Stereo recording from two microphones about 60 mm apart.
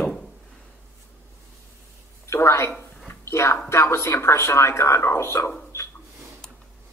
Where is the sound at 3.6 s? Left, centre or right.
Left.